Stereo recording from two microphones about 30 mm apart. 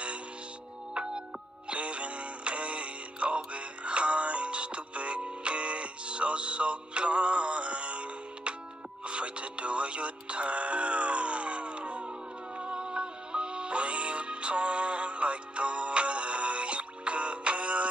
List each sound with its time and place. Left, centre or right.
1.7 s music: right